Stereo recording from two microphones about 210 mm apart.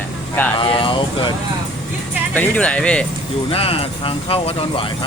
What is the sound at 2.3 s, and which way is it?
Speech, 5° left (ahead or behind).